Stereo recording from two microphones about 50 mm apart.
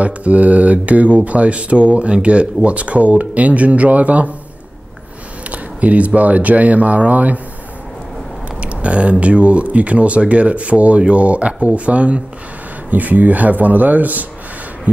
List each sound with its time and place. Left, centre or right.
0.0 s speech: right
5.5 s speech: right
8.5 s speech: right